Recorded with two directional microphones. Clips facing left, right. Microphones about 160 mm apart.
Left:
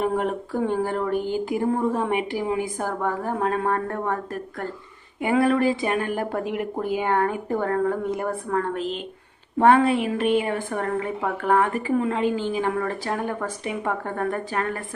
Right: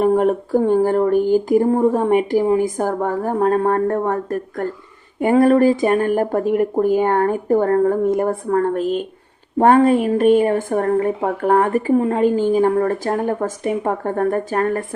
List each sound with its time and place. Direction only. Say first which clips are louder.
0.0 s a woman's voice: right 8 dB; 40° right (ahead or behind)